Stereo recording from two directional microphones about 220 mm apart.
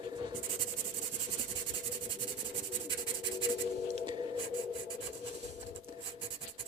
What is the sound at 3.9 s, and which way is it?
Writing, 30° right (ahead or behind).